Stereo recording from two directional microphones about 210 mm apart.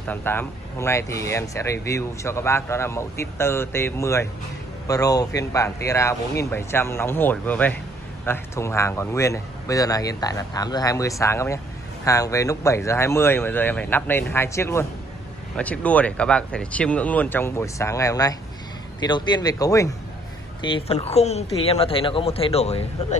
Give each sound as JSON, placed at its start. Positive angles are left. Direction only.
{"t": 0.0, "sound": "speech", "side_deg": 10}
{"t": 20.6, "sound": "speech", "side_deg": 25}